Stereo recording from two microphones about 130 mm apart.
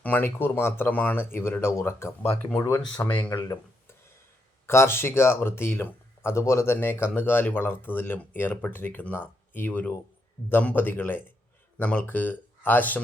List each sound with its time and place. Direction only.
0.0 s speech: 15° left (ahead or behind)